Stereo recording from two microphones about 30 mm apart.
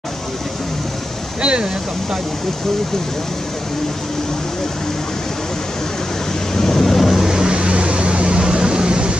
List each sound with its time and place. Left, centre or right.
1.4 s speech: right
6.5 s thunder: centre
7.1 s vehicle: centre
7.5 s vehicle: right